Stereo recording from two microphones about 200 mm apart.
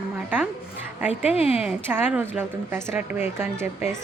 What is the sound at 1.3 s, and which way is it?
Speech, 30° left (ahead or behind).